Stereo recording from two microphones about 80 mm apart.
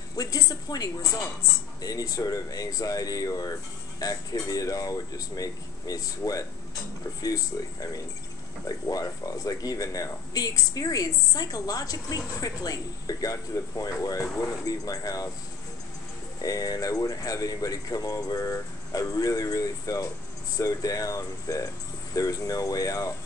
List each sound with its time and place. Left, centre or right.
0.1 s speech: left
16.3 s speech: left